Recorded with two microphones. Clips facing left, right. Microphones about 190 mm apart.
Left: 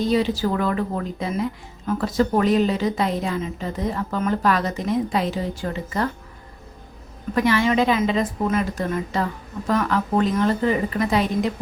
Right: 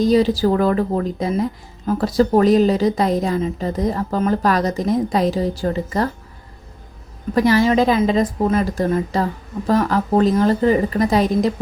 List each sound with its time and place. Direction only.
0.0 s a woman's voice: 40° right (ahead or behind)
7.3 s a woman's voice: 35° right (ahead or behind)